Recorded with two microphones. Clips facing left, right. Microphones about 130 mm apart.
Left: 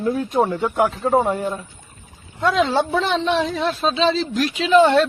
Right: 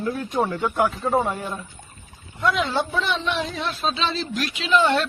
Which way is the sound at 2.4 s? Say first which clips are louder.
Left 4 dB; 35° left (ahead or behind).